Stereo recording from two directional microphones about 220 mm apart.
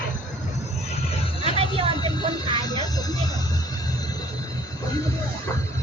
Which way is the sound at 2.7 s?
15° left (ahead or behind).